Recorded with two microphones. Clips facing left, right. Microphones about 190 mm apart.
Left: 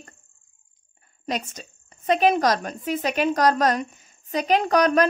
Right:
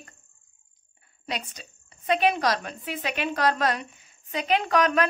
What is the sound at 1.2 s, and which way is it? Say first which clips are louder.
A woman's voice: left 5 dB; 45° left (ahead or behind).